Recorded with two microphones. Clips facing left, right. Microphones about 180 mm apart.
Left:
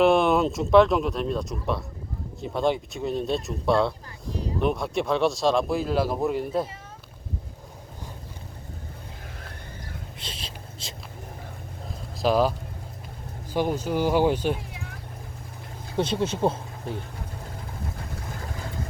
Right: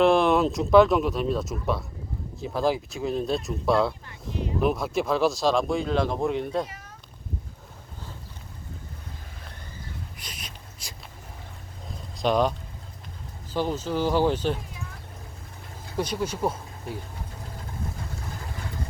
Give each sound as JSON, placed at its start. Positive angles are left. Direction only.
{"t": 0.0, "sound": "speech", "side_deg": 0}
{"t": 4.3, "sound": "speech", "side_deg": 35}
{"t": 4.6, "sound": "speech", "side_deg": 0}
{"t": 10.2, "sound": "a sound", "side_deg": 25}
{"t": 12.1, "sound": "speech", "side_deg": 5}
{"t": 16.0, "sound": "speech", "side_deg": 25}